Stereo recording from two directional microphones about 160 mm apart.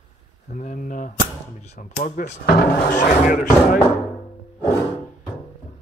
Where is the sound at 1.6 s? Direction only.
45° left (ahead or behind).